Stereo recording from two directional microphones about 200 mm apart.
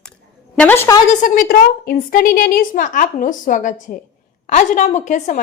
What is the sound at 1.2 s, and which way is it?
A woman's voice, 40° left (ahead or behind).